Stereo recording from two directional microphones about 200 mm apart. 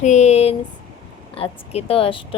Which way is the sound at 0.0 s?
35° left (ahead or behind).